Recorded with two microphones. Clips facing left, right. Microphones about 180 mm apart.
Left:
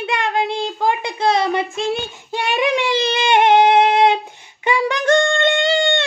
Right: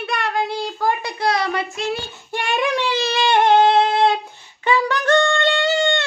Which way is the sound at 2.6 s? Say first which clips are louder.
Left 4 dB; 15° left (ahead or behind).